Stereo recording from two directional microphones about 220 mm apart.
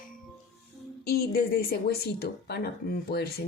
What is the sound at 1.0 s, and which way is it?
Speech, 45° left (ahead or behind).